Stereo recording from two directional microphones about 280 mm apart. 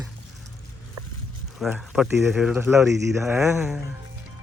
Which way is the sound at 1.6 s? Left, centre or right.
Centre.